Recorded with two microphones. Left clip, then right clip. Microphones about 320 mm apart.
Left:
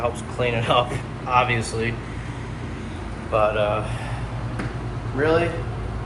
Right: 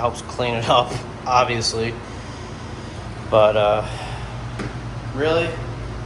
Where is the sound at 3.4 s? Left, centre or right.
Right.